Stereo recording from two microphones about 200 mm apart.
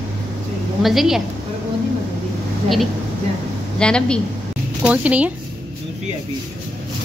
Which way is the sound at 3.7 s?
5° left (ahead or behind).